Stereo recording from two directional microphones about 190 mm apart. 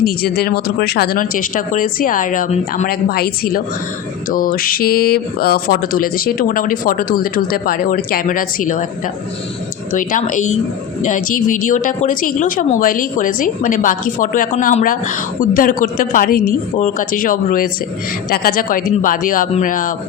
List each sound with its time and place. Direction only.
0.0 s speech: 55° left (ahead or behind)
9.9 s speech: 45° left (ahead or behind)